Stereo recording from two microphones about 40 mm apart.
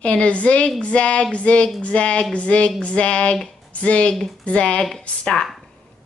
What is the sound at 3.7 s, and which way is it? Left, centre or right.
Speech, left.